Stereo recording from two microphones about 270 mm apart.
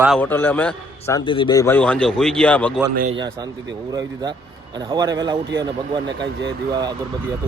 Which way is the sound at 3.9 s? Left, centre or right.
Centre.